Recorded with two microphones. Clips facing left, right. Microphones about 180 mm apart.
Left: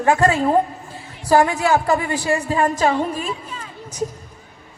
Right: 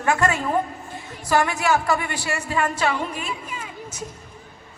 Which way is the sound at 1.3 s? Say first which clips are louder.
Left 5 dB; 30° left (ahead or behind).